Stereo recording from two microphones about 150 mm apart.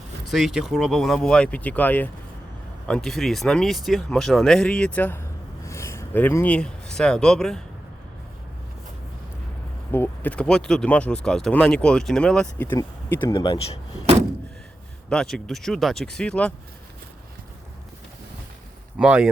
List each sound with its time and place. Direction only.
0.3 s speech: centre (ahead or behind)
9.9 s speech: 15° left (ahead or behind)
13.2 s speech: 25° left (ahead or behind)
15.1 s speech: 5° left (ahead or behind)
18.9 s speech: 10° right (ahead or behind)